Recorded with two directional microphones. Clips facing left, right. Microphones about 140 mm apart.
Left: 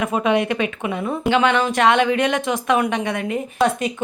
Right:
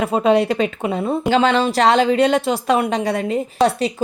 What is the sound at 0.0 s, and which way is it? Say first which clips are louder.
Speech: right 3 dB; 35° right (ahead or behind).